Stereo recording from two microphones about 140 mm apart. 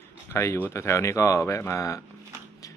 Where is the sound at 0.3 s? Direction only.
20° left (ahead or behind).